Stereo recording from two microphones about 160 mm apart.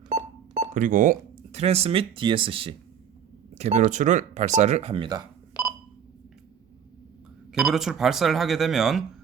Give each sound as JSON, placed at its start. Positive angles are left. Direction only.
{"t": 0.7, "sound": "speech", "side_deg": -55}
{"t": 1.5, "sound": "speech", "side_deg": -40}
{"t": 7.5, "sound": "speech", "side_deg": -5}